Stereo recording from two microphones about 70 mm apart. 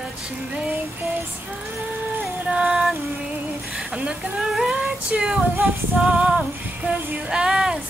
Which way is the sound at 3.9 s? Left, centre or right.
Centre.